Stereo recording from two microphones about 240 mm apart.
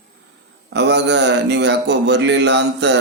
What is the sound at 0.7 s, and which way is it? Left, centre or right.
Speech, right.